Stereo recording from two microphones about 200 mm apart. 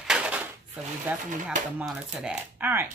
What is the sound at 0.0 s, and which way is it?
Dishes, 5° right (ahead or behind).